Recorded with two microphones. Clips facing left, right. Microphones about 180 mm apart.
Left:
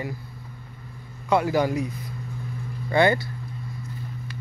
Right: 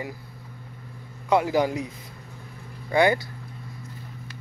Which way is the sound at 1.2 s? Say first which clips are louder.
Even; 20° right (ahead or behind).